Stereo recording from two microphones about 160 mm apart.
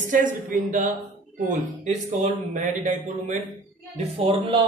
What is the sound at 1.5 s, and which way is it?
Speech, 50° right (ahead or behind).